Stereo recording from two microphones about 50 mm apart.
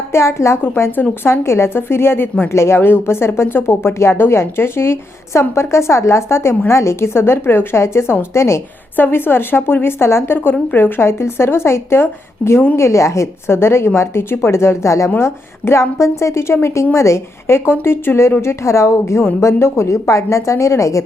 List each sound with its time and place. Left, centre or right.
0.1 s a woman's voice: left
2.5 s speech: left
9.0 s a woman's voice: left
12.4 s a woman's voice: left
12.7 s speech: left
15.2 s a woman's voice: left
17.7 s a woman's voice: left
18.6 s a woman's voice: left